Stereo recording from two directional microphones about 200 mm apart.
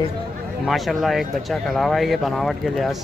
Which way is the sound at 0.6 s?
Centre (ahead or behind).